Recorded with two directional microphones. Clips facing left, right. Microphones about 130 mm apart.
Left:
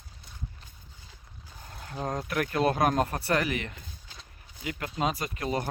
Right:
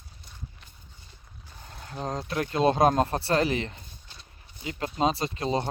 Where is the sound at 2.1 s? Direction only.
25° right (ahead or behind).